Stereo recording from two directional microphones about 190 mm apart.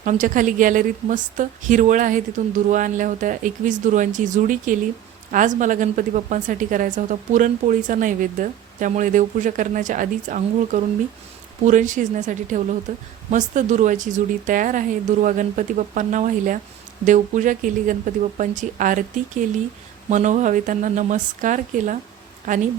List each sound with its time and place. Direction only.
0.0 s a woman's voice: 45° right (ahead or behind)